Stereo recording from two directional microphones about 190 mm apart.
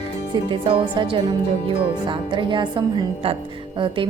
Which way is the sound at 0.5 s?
25° right (ahead or behind).